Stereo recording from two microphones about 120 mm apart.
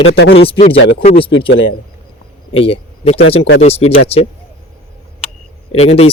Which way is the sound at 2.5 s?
50° left (ahead or behind).